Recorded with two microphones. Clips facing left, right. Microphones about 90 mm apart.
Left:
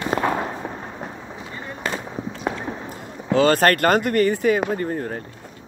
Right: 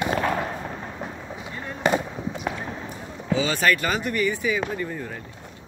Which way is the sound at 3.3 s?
55° left (ahead or behind).